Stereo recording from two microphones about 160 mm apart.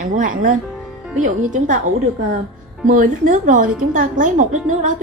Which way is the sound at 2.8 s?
55° right (ahead or behind).